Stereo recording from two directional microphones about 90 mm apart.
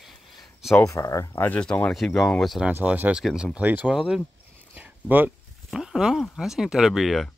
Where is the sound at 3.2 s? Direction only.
Centre (ahead or behind).